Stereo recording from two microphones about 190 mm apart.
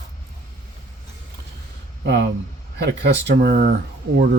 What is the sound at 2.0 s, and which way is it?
Speech, 60° right (ahead or behind).